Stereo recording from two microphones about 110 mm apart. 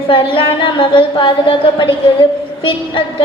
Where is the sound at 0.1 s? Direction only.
50° left (ahead or behind).